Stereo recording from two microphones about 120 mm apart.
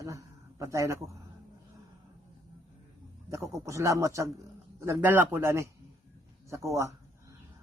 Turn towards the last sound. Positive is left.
turn(degrees=-25)  # may be behind; listen again after turning